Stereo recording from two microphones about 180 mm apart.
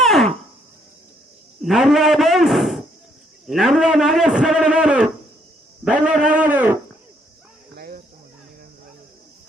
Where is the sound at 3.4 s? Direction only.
Centre (ahead or behind).